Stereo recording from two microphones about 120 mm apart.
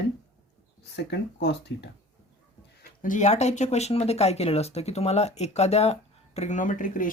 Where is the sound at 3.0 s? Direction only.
90° left.